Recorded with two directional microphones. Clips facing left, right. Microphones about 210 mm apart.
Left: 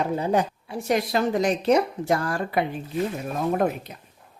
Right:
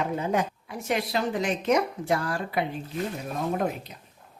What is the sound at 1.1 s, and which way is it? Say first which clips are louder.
A woman's voice: left 5 dB; 45° left (ahead or behind).